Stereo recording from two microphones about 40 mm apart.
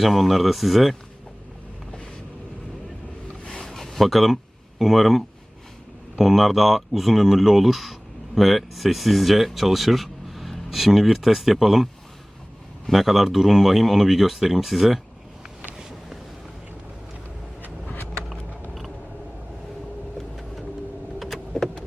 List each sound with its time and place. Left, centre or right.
0.0 s speech: centre
3.4 s a sound: left
3.7 s a sound: centre
4.8 s speech: centre
12.9 s speech: centre
21.2 s power windows: centre